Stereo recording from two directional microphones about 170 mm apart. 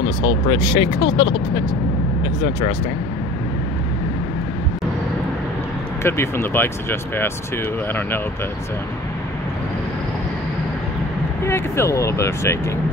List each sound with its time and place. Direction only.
0.5 s speech: 30° left (ahead or behind)
6.0 s speech: 15° left (ahead or behind)
11.4 s speech: 15° left (ahead or behind)